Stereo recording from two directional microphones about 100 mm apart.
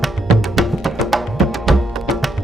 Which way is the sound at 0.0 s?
Centre (ahead or behind).